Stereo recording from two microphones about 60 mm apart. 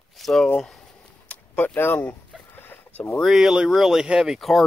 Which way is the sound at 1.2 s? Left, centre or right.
Left.